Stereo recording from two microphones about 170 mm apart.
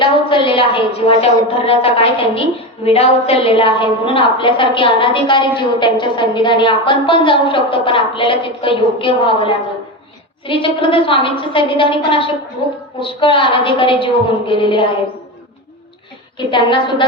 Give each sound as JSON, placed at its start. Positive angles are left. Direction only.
{"t": 0.0, "sound": "a woman's voice", "side_deg": 30}
{"t": 16.4, "sound": "a woman's voice", "side_deg": 30}